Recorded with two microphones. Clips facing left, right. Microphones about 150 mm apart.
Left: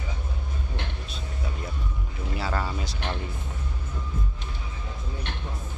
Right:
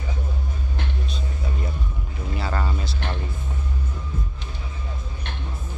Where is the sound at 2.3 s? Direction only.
5° left (ahead or behind).